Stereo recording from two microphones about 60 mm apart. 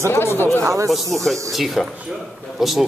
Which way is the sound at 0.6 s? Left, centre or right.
Right.